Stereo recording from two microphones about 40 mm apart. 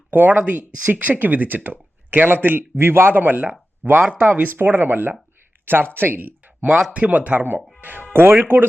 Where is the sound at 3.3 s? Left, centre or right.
Right.